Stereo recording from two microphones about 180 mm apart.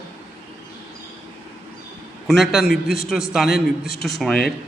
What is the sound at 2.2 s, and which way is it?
A man's voice, centre (ahead or behind).